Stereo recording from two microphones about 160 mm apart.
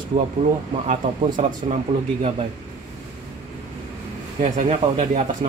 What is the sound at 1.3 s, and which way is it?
Speech, 55° right (ahead or behind).